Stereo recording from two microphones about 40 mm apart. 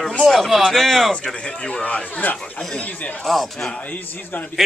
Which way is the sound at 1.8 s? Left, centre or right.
Left.